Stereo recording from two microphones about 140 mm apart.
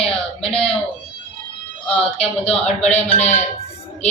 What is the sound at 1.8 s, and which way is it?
Speech, 45° left (ahead or behind).